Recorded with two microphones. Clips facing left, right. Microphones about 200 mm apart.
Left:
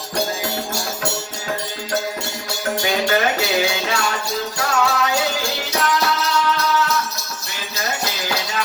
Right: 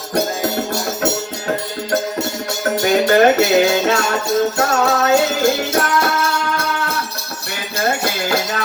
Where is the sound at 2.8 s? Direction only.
45° right (ahead or behind).